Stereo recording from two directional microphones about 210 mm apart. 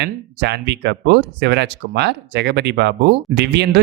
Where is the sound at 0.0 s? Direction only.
55° right (ahead or behind).